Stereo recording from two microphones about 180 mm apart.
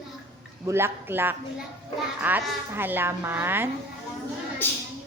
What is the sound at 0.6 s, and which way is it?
A woman's voice, 15° right (ahead or behind).